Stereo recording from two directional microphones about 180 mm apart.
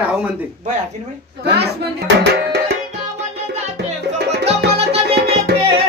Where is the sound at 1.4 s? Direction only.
65° right (ahead or behind).